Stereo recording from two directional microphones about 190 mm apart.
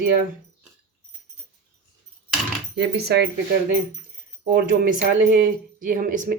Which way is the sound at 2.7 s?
65° right (ahead or behind).